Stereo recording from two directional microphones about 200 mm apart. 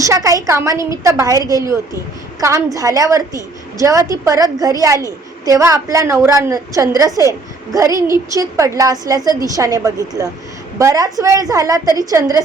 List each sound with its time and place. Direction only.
0.0 s a woman's voice: 15° right (ahead or behind)